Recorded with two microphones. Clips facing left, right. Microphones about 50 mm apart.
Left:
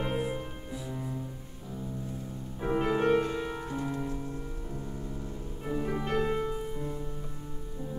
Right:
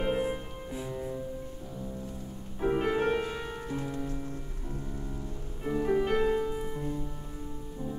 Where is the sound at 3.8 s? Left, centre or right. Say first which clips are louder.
Left 2 dB; centre.